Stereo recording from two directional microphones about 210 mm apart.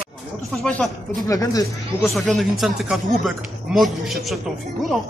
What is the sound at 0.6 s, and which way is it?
Speech, 5° left (ahead or behind).